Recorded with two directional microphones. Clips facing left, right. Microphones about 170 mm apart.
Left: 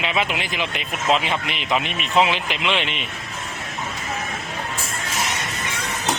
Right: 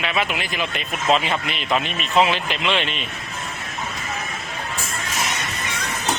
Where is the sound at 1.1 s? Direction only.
10° left (ahead or behind).